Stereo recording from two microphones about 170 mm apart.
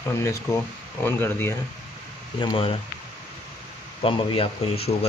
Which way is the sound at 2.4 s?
30° left (ahead or behind).